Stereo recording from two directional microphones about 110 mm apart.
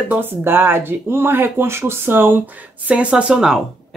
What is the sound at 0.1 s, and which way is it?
Speech, 20° right (ahead or behind).